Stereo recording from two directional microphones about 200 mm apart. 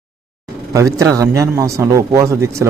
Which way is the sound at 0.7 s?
15° right (ahead or behind).